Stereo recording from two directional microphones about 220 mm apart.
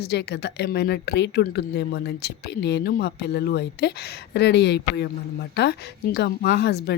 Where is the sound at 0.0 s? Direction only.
50° left (ahead or behind).